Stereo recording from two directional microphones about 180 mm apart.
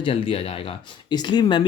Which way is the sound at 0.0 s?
30° left (ahead or behind).